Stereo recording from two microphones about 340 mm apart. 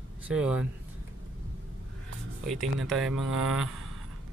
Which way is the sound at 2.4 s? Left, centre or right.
Centre.